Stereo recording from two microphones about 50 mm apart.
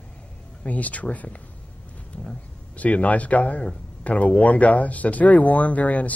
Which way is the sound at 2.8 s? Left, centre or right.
Left.